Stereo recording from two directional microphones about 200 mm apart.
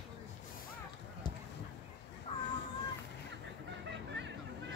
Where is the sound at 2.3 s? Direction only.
30° left (ahead or behind).